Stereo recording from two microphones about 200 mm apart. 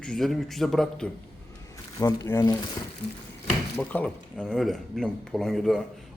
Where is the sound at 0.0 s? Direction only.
Centre (ahead or behind).